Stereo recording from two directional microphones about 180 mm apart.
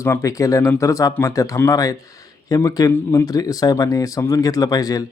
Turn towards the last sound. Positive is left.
turn(degrees=20)  # may be behind; listen again after turning